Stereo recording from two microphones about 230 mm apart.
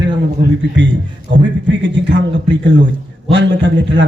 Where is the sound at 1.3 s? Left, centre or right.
Right.